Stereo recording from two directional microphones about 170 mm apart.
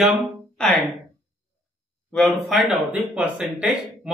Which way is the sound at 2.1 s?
Centre (ahead or behind).